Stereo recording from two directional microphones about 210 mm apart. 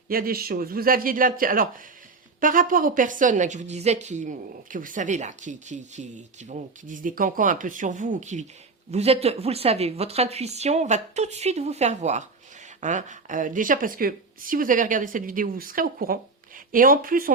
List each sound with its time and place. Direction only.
0.1 s a man's voice: 45° right (ahead or behind)